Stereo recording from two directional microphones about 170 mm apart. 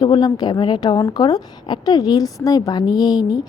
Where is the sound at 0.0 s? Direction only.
25° left (ahead or behind).